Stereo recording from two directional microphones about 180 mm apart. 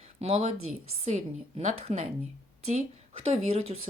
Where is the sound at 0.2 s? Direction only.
35° right (ahead or behind).